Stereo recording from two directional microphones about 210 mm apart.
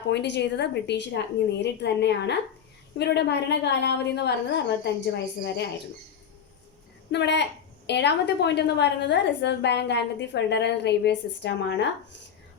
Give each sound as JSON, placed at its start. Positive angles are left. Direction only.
{"t": 0.1, "sound": "a woman's voice", "side_deg": 55}
{"t": 7.1, "sound": "a woman's voice", "side_deg": 55}